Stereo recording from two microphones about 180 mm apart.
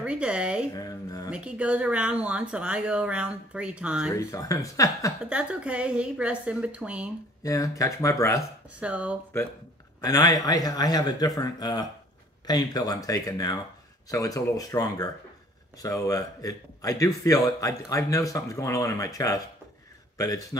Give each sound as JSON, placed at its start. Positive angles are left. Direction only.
{"t": 0.0, "sound": "speech", "side_deg": -5}
{"t": 0.7, "sound": "a man's voice", "side_deg": 20}
{"t": 1.3, "sound": "speech", "side_deg": -5}
{"t": 4.1, "sound": "speech", "side_deg": 20}
{"t": 5.2, "sound": "speech", "side_deg": -5}
{"t": 7.4, "sound": "speech", "side_deg": 20}
{"t": 8.4, "sound": "speech", "side_deg": -5}
{"t": 10.0, "sound": "a man's voice", "side_deg": 20}